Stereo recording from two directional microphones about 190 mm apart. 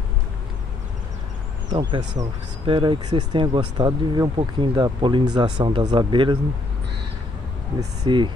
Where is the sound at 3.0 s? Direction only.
35° right (ahead or behind).